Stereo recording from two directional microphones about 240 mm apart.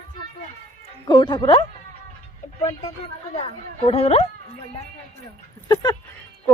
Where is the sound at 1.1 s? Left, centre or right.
Centre.